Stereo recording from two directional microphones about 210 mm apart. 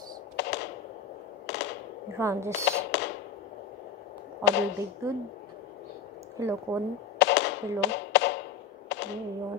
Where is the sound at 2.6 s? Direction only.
55° left (ahead or behind).